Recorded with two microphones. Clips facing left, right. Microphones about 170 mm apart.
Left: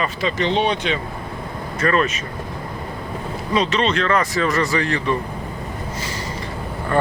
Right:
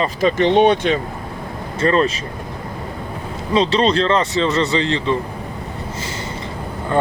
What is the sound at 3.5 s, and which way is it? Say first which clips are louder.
Speech: right 4 dB; 30° right (ahead or behind).